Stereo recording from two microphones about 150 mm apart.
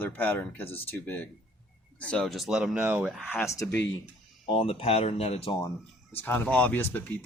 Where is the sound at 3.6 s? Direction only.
20° left (ahead or behind).